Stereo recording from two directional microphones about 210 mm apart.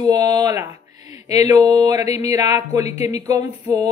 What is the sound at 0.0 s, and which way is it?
Speech, 20° right (ahead or behind).